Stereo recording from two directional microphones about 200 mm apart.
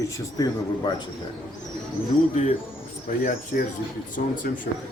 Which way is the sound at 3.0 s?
40° left (ahead or behind).